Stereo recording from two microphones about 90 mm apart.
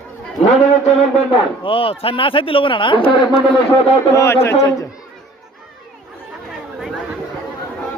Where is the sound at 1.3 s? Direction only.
85° left; by 3.0 s 65° left (ahead or behind).